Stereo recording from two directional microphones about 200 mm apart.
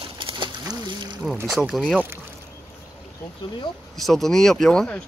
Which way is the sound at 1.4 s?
5° right (ahead or behind).